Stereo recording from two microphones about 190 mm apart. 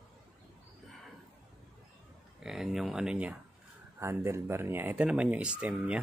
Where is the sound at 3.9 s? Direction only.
15° right (ahead or behind).